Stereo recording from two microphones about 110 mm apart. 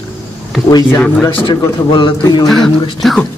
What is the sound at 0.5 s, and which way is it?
Speech, centre (ahead or behind).